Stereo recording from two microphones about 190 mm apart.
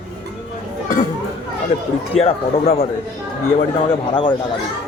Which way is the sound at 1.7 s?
30° left (ahead or behind).